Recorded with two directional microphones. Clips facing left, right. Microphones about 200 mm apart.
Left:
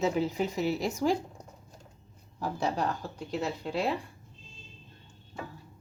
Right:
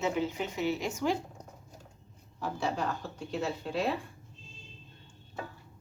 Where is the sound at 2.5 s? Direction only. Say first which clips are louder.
Left 2 dB; 40° left (ahead or behind).